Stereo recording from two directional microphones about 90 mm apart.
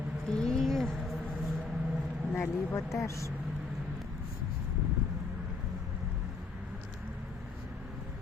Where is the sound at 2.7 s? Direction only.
35° left (ahead or behind).